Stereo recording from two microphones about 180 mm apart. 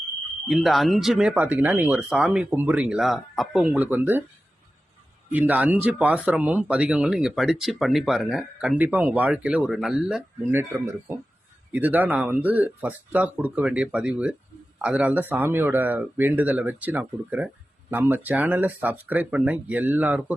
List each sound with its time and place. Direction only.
0.4 s speech: centre (ahead or behind)
5.3 s speech: 10° right (ahead or behind)
10.5 s speech: 10° right (ahead or behind)